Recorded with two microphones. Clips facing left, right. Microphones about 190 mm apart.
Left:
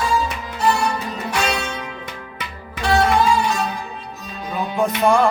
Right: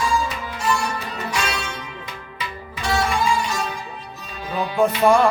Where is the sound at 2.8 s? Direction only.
65° left (ahead or behind).